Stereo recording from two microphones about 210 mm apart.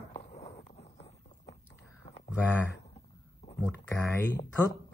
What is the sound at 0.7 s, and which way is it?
Clip-clop, 30° left (ahead or behind).